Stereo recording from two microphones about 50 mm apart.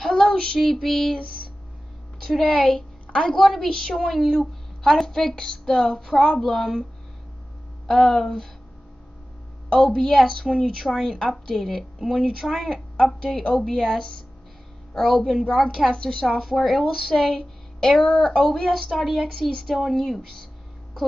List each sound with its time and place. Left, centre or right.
0.0 s child singing: centre
2.4 s a woman's voice: centre
3.3 s a woman's voice: centre
9.7 s a woman's voice: centre
12.9 s a woman's voice: centre
16.3 s a woman's voice: centre